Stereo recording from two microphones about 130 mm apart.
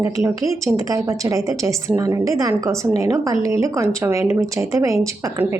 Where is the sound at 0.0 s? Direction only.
25° right (ahead or behind).